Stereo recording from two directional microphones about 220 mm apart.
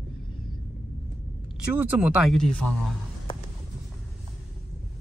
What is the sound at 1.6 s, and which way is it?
Speech, 5° right (ahead or behind).